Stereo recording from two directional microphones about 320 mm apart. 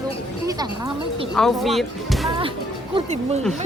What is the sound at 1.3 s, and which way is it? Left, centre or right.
Speech, centre.